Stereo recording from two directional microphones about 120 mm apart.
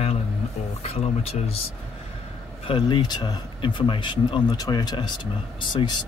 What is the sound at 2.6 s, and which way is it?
Speech, 45° left (ahead or behind).